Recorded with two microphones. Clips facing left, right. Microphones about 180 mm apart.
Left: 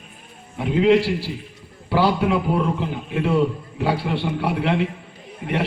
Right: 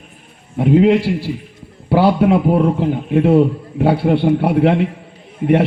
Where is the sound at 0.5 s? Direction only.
50° right (ahead or behind).